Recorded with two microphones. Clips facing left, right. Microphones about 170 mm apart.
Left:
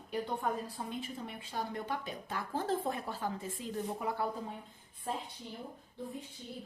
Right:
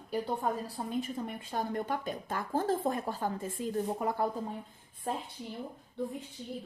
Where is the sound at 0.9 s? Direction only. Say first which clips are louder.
Right 6 dB; 45° right (ahead or behind).